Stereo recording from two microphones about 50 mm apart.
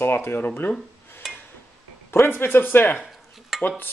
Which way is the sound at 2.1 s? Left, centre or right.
Left.